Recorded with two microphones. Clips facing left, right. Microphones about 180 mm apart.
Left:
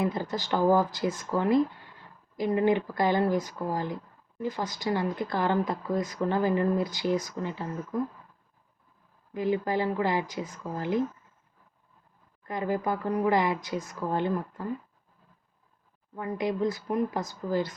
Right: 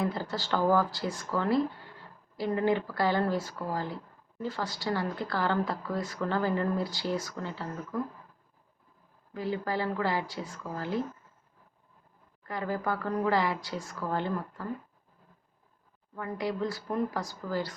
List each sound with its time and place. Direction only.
0.0 s a woman's voice: 20° left (ahead or behind)
9.3 s a woman's voice: 20° left (ahead or behind)
12.4 s a woman's voice: 20° left (ahead or behind)
16.1 s a woman's voice: 20° left (ahead or behind)